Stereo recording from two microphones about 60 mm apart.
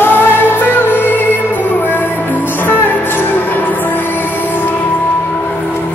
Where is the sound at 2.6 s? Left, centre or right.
Left.